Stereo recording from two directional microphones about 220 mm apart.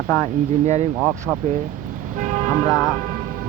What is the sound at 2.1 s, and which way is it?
Speech, 35° right (ahead or behind).